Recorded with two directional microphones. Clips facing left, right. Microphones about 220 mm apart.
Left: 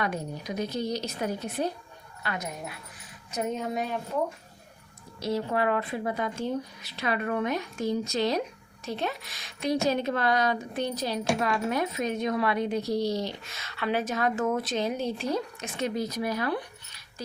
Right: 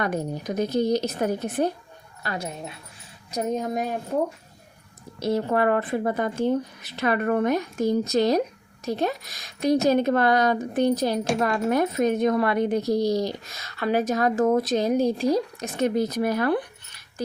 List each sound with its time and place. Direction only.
0.0 s speech: 45° right (ahead or behind)
2.2 s speech: 35° right (ahead or behind)
5.2 s speech: 50° right (ahead or behind)
15.8 s speech: 50° right (ahead or behind)